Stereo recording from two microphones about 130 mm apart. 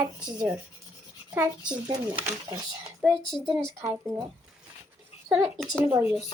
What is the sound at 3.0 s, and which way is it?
Speech, centre (ahead or behind).